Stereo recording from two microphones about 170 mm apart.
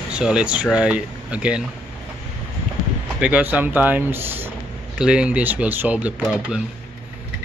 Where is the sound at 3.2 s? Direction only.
5° right (ahead or behind).